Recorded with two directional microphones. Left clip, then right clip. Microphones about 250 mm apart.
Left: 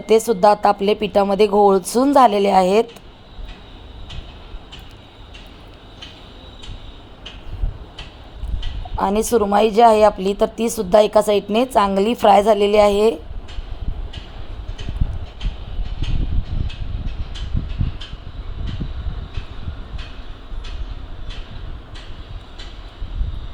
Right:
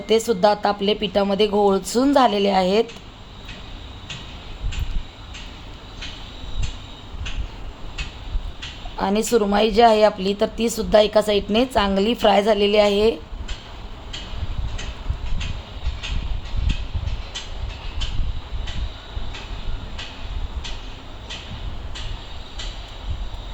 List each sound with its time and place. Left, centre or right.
0.0 s speech: centre
9.0 s a woman's voice: centre